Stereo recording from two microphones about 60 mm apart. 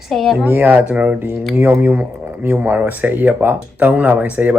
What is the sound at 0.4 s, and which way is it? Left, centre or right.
Speech, right.